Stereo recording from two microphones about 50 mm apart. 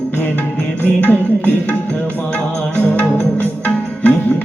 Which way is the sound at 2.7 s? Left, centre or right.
Left.